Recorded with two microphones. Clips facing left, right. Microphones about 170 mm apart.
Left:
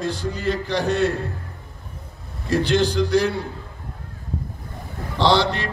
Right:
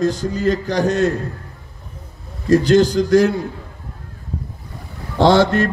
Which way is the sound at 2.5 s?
40° right (ahead or behind).